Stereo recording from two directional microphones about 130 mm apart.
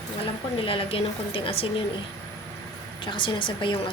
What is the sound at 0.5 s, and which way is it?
A woman's voice, 45° left (ahead or behind).